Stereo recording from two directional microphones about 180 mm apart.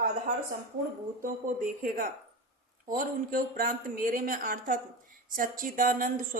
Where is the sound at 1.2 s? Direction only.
50° right (ahead or behind).